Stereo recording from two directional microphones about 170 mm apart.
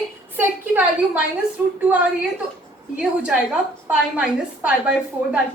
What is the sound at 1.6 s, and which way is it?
Speech, 10° right (ahead or behind).